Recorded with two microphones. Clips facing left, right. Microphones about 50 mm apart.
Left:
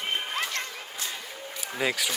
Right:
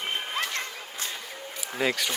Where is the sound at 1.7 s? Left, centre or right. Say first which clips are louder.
Right 1 dB; centre.